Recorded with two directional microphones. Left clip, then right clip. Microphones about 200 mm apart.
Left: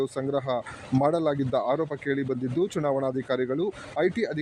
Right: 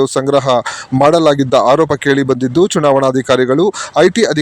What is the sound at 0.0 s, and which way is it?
Speech, 45° right (ahead or behind).